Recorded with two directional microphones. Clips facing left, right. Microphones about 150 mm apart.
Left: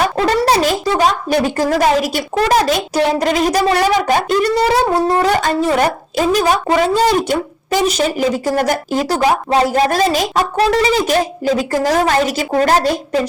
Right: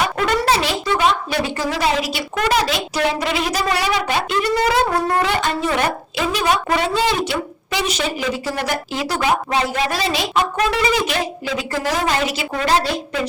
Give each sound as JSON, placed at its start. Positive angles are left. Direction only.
{"t": 0.0, "sound": "a sound", "side_deg": 35}
{"t": 2.3, "sound": "a woman's voice", "side_deg": 40}
{"t": 4.9, "sound": "wind instrument", "side_deg": 25}
{"t": 5.2, "sound": "a woman's voice", "side_deg": 40}